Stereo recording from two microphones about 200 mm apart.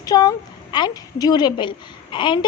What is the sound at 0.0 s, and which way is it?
A woman's voice, 20° left (ahead or behind).